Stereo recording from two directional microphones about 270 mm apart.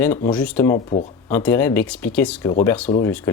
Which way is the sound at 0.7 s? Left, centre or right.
Left.